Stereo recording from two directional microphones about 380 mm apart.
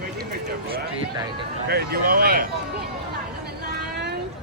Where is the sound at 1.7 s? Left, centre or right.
Right.